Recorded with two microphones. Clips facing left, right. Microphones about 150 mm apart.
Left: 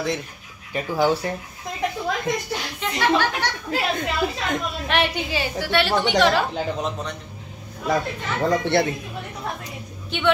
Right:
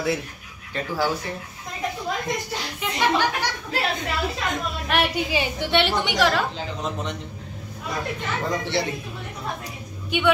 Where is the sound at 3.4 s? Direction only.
10° right (ahead or behind).